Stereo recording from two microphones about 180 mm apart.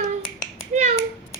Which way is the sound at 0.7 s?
40° right (ahead or behind).